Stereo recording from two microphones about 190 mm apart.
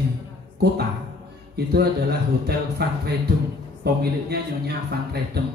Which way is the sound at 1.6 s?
60° right (ahead or behind).